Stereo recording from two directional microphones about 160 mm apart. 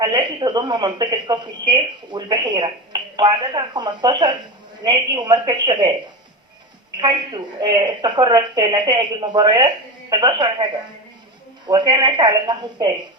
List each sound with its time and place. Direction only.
0.0 s speech: 30° right (ahead or behind)
6.9 s a woman's voice: 25° right (ahead or behind)
11.7 s speech: 25° right (ahead or behind)